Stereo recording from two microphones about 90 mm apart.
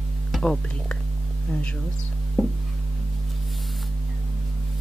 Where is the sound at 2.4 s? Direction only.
5° left (ahead or behind).